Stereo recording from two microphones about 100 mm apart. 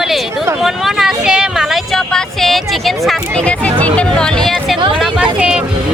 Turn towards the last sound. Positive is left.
turn(degrees=-5)  # may be behind; listen again after turning